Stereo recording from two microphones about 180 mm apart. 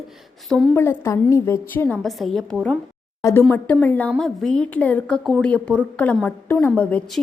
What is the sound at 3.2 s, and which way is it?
A woman's voice, 15° left (ahead or behind).